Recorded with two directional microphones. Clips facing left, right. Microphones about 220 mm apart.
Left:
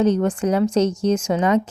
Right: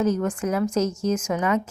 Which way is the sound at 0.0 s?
30° left (ahead or behind).